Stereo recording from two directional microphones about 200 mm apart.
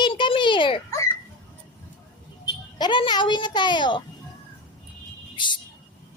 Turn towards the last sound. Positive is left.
turn(degrees=25)  # may be behind; listen again after turning